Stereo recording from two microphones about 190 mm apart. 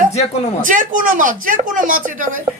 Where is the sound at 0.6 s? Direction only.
45° right (ahead or behind).